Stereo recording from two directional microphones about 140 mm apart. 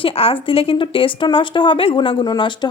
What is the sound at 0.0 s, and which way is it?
A woman's voice, 40° left (ahead or behind).